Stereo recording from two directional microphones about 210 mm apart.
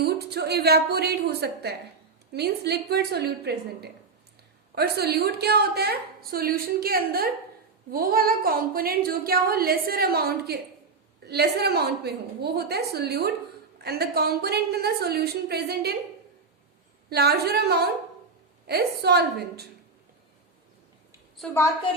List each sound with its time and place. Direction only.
0.0 s a woman's voice: 50° right (ahead or behind)
17.1 s a woman's voice: 50° right (ahead or behind)
21.3 s a woman's voice: 5° left (ahead or behind)